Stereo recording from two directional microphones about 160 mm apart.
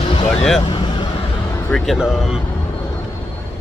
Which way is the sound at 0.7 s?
30° left (ahead or behind).